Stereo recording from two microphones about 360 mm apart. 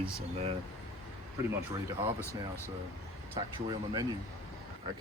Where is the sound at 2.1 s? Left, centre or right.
Centre.